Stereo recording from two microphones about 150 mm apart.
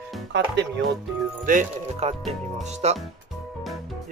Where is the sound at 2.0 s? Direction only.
45° right (ahead or behind).